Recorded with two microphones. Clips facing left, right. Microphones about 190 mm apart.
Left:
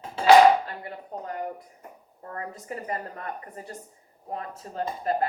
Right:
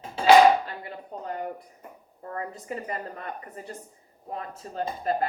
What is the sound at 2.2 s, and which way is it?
Speech, 30° right (ahead or behind).